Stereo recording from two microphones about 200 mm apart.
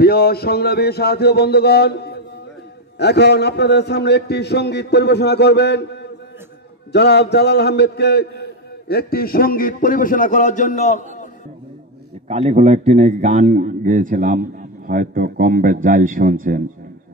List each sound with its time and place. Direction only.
0.0 s a man's voice: 50° left (ahead or behind)
12.3 s a man's voice: 35° right (ahead or behind)